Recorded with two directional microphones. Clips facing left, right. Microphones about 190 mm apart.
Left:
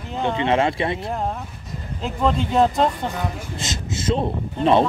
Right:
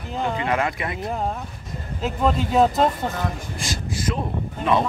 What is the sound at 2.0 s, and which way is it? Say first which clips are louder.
Speech: even; 5° right (ahead or behind).